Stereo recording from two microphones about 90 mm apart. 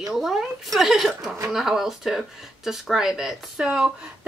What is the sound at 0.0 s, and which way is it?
Speech, 5° right (ahead or behind).